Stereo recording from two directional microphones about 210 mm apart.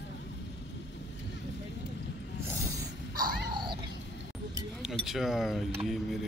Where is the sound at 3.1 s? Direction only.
20° right (ahead or behind).